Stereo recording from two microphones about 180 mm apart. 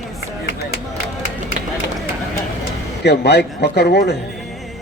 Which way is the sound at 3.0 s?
65° left (ahead or behind).